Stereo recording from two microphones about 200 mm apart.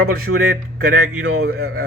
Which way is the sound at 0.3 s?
65° right (ahead or behind).